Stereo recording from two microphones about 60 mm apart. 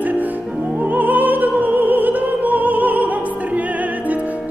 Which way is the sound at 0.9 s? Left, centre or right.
Right.